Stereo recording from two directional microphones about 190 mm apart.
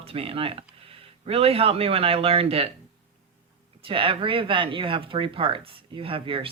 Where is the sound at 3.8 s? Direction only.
30° right (ahead or behind).